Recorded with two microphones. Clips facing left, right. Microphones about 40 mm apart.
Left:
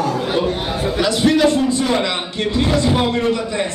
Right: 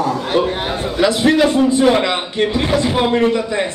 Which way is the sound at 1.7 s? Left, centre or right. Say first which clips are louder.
Right 5 dB; right.